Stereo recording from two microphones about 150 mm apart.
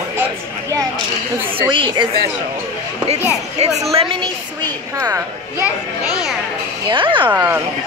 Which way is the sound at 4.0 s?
35° right (ahead or behind).